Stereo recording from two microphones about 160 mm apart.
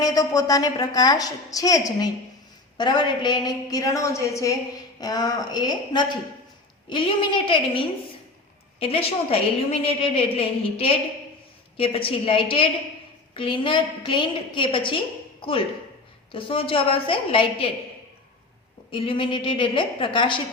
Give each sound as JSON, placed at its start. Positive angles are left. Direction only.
{"t": 0.0, "sound": "a woman's voice", "side_deg": 25}
{"t": 18.9, "sound": "a woman's voice", "side_deg": 35}